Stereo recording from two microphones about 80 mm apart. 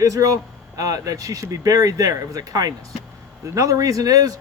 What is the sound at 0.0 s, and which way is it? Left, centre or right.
Speech, right.